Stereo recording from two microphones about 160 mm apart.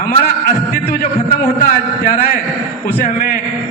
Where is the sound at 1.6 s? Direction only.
60° left (ahead or behind).